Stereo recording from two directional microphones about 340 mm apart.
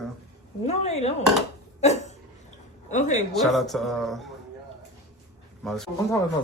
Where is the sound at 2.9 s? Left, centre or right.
Left.